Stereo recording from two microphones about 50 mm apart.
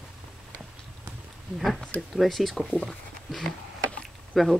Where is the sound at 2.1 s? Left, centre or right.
Centre.